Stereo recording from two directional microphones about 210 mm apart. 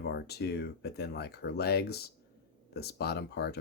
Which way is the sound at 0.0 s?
50° left (ahead or behind).